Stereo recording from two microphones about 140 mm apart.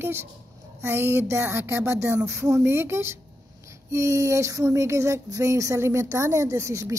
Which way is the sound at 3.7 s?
20° right (ahead or behind).